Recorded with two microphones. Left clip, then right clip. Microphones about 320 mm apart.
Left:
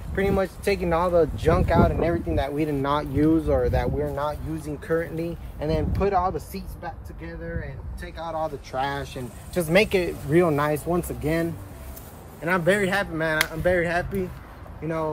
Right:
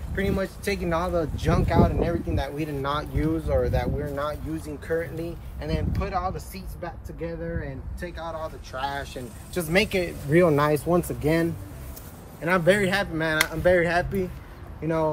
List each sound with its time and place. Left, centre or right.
0.1 s speech: centre
8.2 s speech: centre
10.3 s a man's voice: centre